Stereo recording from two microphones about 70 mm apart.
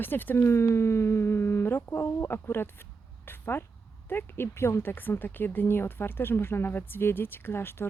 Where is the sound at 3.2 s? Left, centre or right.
Left.